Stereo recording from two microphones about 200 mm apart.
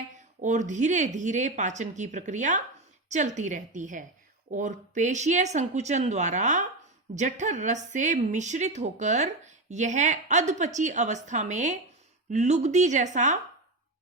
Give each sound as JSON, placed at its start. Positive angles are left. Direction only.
{"t": 0.4, "sound": "a woman's voice", "side_deg": -35}